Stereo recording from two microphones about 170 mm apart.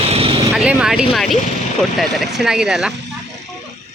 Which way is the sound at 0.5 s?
5° right (ahead or behind).